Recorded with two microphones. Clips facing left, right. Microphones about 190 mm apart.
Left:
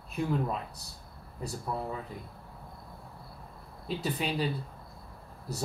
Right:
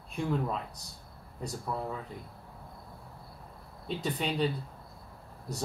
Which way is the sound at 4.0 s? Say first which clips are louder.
Even; 5° left (ahead or behind).